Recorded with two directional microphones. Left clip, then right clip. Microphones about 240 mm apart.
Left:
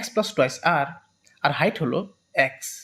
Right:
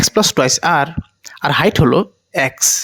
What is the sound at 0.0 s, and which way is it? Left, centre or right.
Speech, right.